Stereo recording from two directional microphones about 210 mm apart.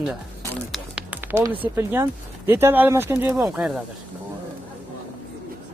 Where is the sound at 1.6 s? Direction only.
10° right (ahead or behind).